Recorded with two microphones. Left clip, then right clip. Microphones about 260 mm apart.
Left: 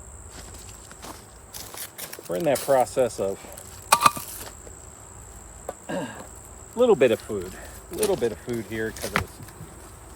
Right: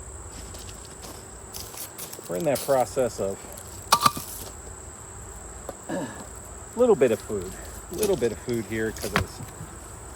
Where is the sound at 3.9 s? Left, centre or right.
Left.